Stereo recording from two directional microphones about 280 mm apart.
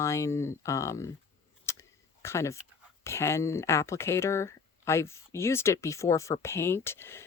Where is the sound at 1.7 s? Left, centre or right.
Centre.